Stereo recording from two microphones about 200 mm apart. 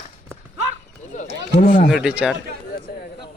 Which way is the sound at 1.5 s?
40° left (ahead or behind).